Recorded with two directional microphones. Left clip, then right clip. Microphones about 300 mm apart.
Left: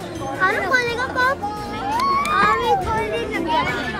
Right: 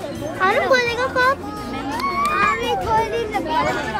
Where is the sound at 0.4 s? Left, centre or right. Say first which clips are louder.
Right 2 dB; centre.